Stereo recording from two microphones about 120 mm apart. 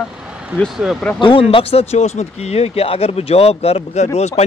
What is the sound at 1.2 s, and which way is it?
Speech, 45° left (ahead or behind).